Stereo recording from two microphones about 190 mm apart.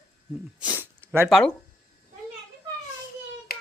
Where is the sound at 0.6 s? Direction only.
10° right (ahead or behind).